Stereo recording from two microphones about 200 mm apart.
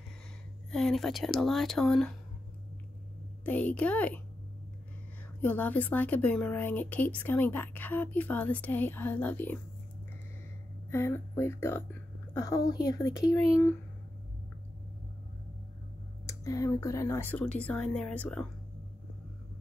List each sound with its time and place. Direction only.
0.7 s speech: centre (ahead or behind)
3.4 s a woman's voice: 5° left (ahead or behind)
5.4 s a woman's voice: 10° left (ahead or behind)
10.9 s a woman's voice: 10° left (ahead or behind)
16.3 s a woman's voice: 15° left (ahead or behind)